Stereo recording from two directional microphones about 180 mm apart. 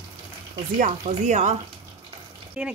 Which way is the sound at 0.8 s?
45° right (ahead or behind).